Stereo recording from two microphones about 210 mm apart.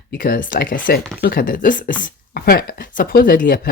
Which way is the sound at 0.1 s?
45° left (ahead or behind).